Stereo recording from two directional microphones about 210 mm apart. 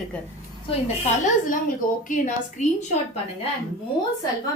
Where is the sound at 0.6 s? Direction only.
35° left (ahead or behind).